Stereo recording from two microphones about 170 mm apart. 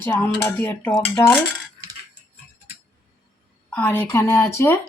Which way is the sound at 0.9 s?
20° left (ahead or behind).